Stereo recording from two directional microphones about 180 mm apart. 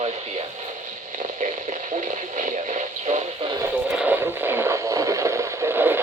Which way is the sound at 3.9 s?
10° right (ahead or behind).